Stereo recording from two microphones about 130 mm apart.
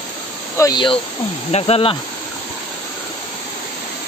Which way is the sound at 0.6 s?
35° left (ahead or behind).